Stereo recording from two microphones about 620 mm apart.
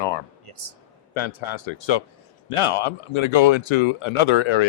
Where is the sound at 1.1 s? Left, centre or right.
Left.